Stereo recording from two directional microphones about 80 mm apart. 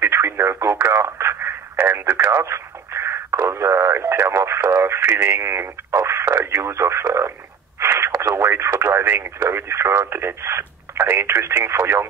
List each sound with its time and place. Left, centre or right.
0.0 s radio: right
0.9 s speech: right
7.8 s radio: right
8.1 s speech: right